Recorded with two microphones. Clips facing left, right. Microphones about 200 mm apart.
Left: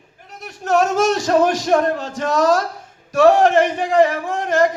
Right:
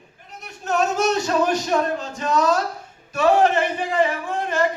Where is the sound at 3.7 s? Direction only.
90° left.